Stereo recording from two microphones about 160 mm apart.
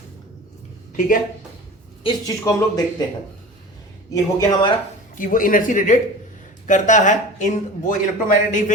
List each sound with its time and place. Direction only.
0.9 s speech: 55° left (ahead or behind)
2.0 s speech: 25° left (ahead or behind)
4.1 s speech: 20° left (ahead or behind)
5.1 s speech: 55° left (ahead or behind)